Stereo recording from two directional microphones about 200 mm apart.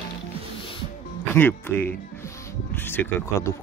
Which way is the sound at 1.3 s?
10° left (ahead or behind).